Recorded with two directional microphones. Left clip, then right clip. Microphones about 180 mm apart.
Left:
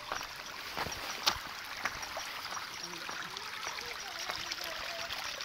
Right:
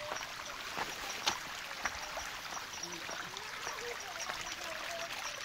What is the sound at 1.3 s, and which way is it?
Boat, 55° left (ahead or behind).